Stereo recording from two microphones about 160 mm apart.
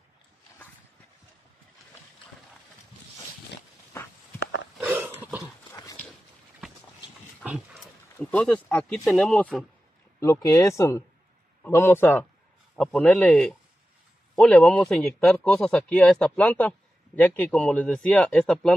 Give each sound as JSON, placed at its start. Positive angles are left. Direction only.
{"t": 4.7, "sound": "a sound", "side_deg": -10}
{"t": 8.2, "sound": "a man's voice", "side_deg": 10}
{"t": 10.2, "sound": "a man's voice", "side_deg": 20}
{"t": 12.7, "sound": "a man's voice", "side_deg": 0}